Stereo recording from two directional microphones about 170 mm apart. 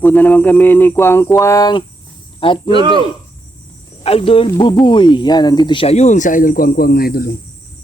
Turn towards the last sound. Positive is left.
turn(degrees=60)  # may be behind; listen again after turning